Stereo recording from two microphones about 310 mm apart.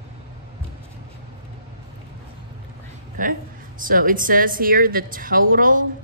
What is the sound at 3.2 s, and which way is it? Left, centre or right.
A woman's voice, right.